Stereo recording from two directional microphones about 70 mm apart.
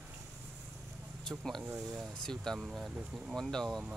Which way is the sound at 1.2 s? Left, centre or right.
Centre.